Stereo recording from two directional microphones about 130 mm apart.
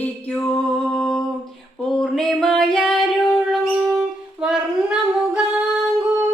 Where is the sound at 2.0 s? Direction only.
5° left (ahead or behind).